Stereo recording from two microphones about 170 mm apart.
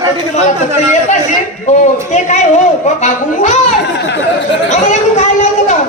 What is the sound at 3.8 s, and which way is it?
Speech, 85° left.